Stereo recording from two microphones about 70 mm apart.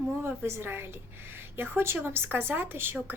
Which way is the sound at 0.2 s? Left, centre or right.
Right.